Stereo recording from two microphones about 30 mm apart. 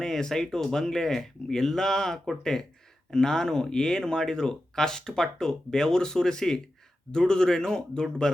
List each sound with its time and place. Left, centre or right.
0.0 s speech: centre